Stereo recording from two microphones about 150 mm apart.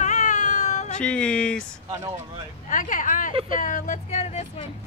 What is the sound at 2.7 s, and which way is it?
Speech, 60° left (ahead or behind).